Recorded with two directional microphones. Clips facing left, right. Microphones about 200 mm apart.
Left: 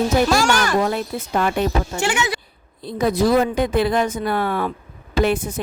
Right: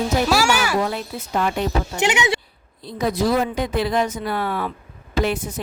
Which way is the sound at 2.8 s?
50° left (ahead or behind).